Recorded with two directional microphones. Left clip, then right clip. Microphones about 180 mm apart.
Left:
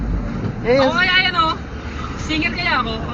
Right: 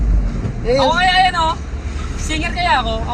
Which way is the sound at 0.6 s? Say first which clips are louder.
Right 1 dB; 30° right (ahead or behind).